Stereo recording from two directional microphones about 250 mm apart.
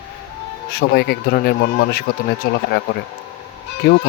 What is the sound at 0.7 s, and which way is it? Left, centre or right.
Speech, left.